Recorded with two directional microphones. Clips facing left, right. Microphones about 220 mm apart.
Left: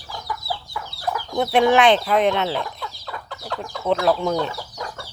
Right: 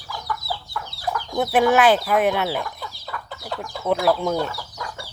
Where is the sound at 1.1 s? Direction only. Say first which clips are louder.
Left 1 dB; centre (ahead or behind).